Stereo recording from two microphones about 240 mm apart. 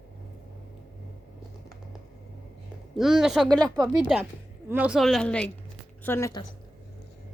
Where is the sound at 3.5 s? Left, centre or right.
Centre.